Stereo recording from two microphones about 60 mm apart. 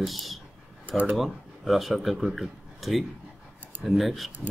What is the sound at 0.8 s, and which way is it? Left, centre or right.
Speech, right.